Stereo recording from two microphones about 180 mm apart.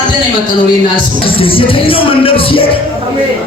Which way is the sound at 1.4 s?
30° left (ahead or behind).